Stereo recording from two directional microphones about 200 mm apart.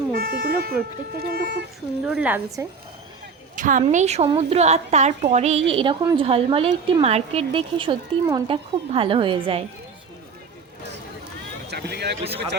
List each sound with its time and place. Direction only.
0.2 s sheep: 50° right (ahead or behind)
1.2 s speech: 50° right (ahead or behind)
2.0 s a woman's voice: 5° right (ahead or behind)
3.5 s a woman's voice: 40° right (ahead or behind)
11.7 s speech: 55° right (ahead or behind)